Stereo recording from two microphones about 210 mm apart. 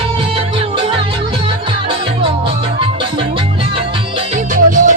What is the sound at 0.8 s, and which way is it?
Music, 25° right (ahead or behind).